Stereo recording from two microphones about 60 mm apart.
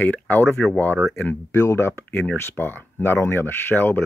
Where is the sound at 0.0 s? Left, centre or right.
Left.